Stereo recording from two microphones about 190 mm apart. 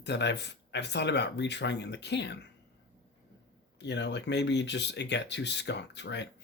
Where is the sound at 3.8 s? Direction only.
65° left (ahead or behind).